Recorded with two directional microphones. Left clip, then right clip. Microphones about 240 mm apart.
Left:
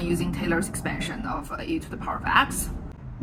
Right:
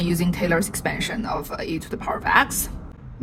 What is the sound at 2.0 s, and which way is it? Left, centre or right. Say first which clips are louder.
Speech: right 3 dB; right.